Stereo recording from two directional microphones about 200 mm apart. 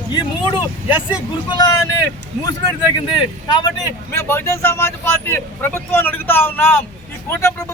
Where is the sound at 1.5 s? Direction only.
20° left (ahead or behind).